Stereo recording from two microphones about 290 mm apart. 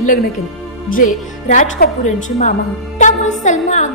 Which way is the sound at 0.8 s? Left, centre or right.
Left.